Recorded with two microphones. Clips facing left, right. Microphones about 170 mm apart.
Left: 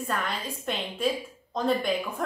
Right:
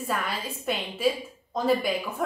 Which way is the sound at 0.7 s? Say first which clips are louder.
Right 2 dB; 5° right (ahead or behind).